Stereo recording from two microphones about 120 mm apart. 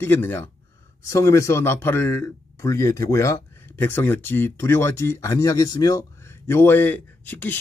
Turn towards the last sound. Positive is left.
turn(degrees=15)  # may be behind; listen again after turning